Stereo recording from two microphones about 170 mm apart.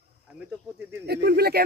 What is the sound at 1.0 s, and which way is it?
Speech, 75° right (ahead or behind).